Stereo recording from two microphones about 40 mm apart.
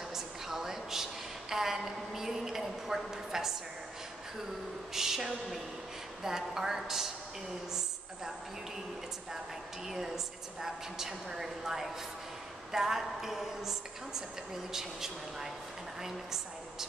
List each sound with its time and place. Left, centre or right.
0.1 s a sound: centre
4.9 s a woman's voice: centre
9.8 s a woman's voice: centre